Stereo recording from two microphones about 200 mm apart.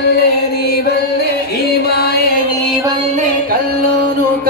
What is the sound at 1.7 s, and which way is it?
Chant, 50° left (ahead or behind).